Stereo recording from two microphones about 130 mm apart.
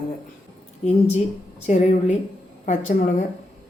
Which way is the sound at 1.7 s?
70° left (ahead or behind).